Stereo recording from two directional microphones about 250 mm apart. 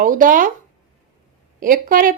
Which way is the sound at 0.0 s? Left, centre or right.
Right.